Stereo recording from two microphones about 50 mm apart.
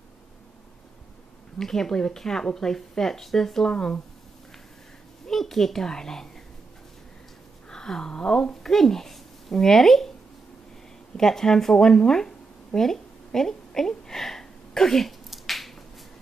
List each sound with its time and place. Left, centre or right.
1.6 s speech: centre
3.7 s speech: left
5.2 s a woman's voice: centre
7.7 s speech: centre
11.1 s speech: centre
12.7 s a sound: centre